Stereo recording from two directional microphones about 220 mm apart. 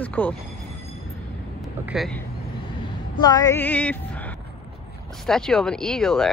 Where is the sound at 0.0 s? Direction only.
5° left (ahead or behind).